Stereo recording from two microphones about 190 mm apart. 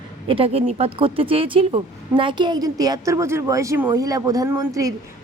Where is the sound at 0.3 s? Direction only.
30° right (ahead or behind).